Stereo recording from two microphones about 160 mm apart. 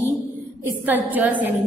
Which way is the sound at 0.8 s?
10° right (ahead or behind).